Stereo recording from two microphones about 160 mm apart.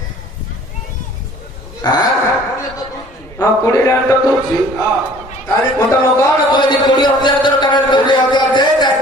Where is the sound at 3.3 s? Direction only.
20° left (ahead or behind).